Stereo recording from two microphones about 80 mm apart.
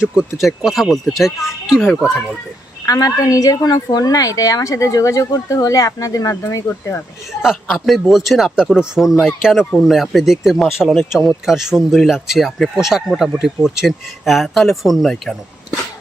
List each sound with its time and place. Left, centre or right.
0.3 s speech: centre
2.8 s a woman's voice: left
7.4 s speech: centre